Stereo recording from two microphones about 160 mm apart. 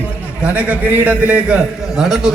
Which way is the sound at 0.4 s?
10° right (ahead or behind).